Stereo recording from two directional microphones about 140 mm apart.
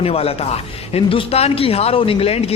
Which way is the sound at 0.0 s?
45° left (ahead or behind).